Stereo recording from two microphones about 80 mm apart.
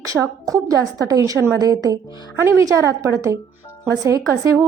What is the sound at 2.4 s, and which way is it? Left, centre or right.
A woman's voice, right.